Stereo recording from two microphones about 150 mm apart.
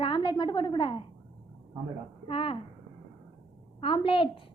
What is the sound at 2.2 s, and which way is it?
Speech, 35° left (ahead or behind).